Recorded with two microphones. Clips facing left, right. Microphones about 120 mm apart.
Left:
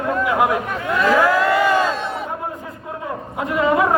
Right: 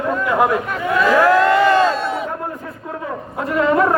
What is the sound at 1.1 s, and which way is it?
Crowd, 5° left (ahead or behind).